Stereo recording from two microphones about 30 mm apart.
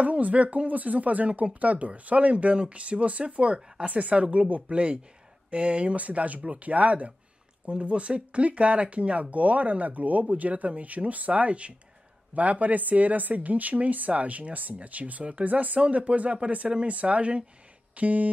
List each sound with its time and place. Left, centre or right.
0.0 s speech: right
3.8 s speech: right
6.0 s speech: right
7.6 s speech: right
8.7 s speech: right
15.4 s speech: right
17.9 s speech: right